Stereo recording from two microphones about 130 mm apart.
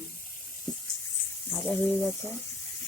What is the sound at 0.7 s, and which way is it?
Water tap, 30° left (ahead or behind).